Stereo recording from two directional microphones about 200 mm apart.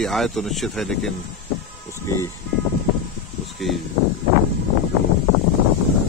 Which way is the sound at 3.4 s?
Centre (ahead or behind).